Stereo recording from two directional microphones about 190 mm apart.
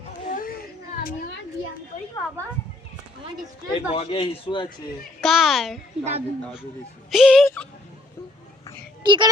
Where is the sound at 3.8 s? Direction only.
30° left (ahead or behind).